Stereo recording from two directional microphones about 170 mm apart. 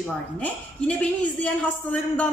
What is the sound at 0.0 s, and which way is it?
A woman's voice, 5° left (ahead or behind).